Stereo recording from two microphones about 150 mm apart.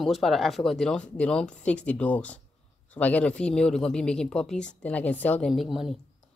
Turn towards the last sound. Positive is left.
turn(degrees=0)  # may be behind; listen again after turning